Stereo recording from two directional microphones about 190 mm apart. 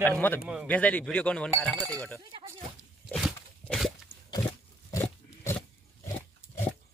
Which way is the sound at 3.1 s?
Centre (ahead or behind).